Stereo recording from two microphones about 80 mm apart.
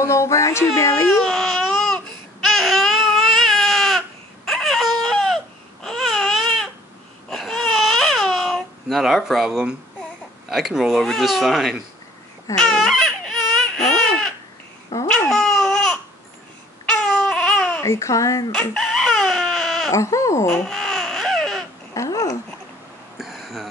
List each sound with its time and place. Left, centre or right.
0.0 s speech: left
1.3 s baby cry: centre
10.5 s speech: centre
12.5 s baby cry: centre
15.0 s babbling: centre
16.8 s baby cry: centre
17.8 s speech: left
18.5 s chicken: centre
19.9 s speech: left
20.4 s baby cry: centre
21.9 s babbling: left
23.1 s a sound: centre